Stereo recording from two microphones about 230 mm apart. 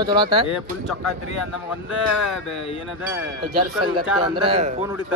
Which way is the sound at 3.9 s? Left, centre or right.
Right.